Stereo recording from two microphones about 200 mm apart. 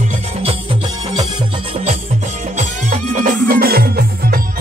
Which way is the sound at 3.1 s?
40° right (ahead or behind).